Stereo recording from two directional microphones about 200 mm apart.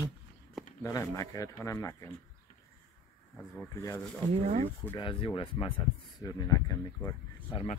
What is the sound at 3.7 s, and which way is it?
Speech, 15° left (ahead or behind).